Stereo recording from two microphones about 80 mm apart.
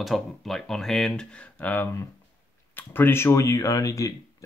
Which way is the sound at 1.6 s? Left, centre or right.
Left.